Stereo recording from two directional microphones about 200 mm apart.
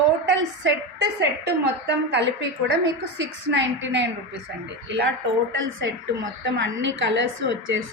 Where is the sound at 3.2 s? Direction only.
65° right (ahead or behind).